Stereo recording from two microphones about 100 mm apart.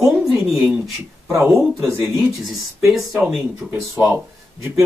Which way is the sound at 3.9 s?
20° right (ahead or behind).